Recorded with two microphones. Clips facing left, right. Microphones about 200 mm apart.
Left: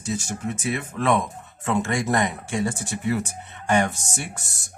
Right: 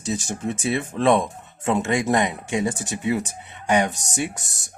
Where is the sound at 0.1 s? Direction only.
20° right (ahead or behind).